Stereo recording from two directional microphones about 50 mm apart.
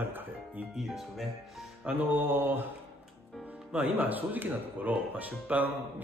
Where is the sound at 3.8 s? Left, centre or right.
Right.